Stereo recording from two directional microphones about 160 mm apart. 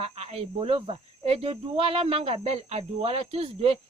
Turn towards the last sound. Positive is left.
turn(degrees=-35)  # may be behind; listen again after turning